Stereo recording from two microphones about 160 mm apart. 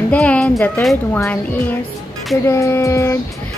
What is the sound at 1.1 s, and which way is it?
A woman's voice, 10° left (ahead or behind).